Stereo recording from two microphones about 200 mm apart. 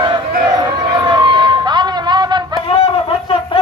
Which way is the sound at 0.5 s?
20° right (ahead or behind).